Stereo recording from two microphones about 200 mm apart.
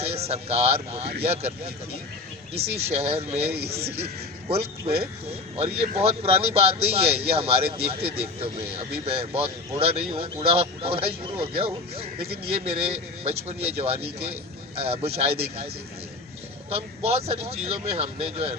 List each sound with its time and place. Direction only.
0.0 s a man's voice: 30° right (ahead or behind)
3.5 s a man's voice: 50° right (ahead or behind)
4.4 s a man's voice: 30° right (ahead or behind)
16.7 s a man's voice: 30° right (ahead or behind)